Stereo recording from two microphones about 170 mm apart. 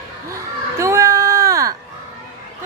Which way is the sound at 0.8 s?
15° right (ahead or behind).